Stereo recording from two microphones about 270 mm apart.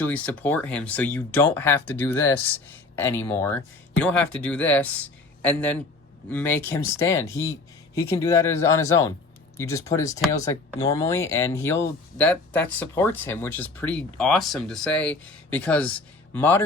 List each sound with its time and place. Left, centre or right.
0.0 s speech: centre
7.3 s speech: left
7.9 s speech: centre